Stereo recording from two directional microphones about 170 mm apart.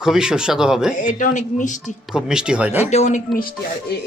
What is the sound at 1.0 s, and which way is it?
Speech, 50° left (ahead or behind).